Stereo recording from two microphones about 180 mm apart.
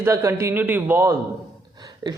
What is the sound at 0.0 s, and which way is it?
Speech, 15° right (ahead or behind).